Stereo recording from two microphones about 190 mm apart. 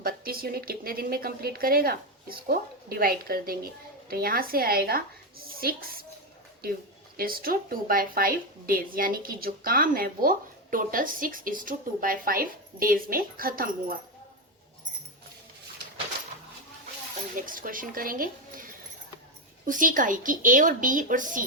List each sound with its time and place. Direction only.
0.0 s a woman's voice: 50° right (ahead or behind)
7.2 s a woman's voice: 50° right (ahead or behind)
17.4 s a woman's voice: 45° right (ahead or behind)